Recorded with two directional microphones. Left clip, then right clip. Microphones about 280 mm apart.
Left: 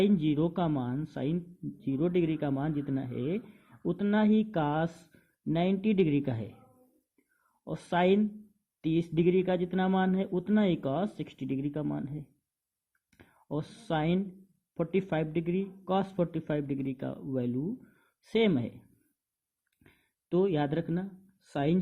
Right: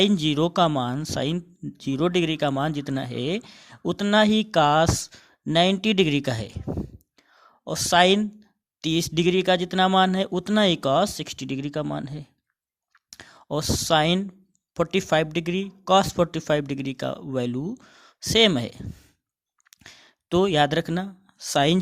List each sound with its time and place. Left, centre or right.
0.0 s speech: right
7.6 s speech: right
20.3 s speech: right